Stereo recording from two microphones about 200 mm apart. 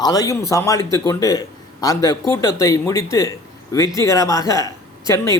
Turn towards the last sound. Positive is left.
turn(degrees=15)  # may be behind; listen again after turning